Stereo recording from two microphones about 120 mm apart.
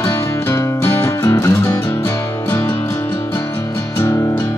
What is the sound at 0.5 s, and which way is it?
Music, 25° left (ahead or behind).